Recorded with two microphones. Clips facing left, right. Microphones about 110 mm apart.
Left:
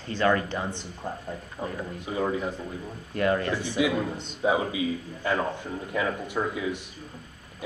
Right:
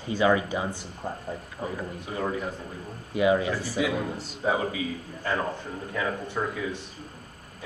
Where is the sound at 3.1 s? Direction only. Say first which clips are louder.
Right 2 dB; 5° right (ahead or behind).